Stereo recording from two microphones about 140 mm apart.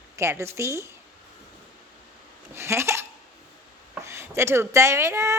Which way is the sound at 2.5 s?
20° right (ahead or behind).